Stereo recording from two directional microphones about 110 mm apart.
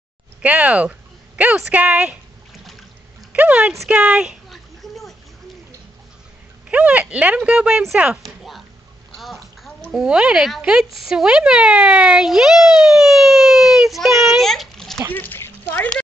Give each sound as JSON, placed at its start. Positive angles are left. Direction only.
{"t": 0.4, "sound": "speech", "side_deg": -15}
{"t": 3.3, "sound": "speech", "side_deg": -15}
{"t": 3.9, "sound": "a sound", "side_deg": -10}
{"t": 6.7, "sound": "speech", "side_deg": -10}
{"t": 15.1, "sound": "speech", "side_deg": 20}